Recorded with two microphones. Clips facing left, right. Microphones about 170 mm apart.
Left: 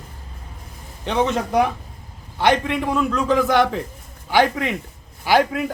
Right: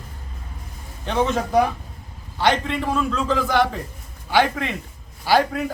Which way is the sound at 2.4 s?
15° left (ahead or behind).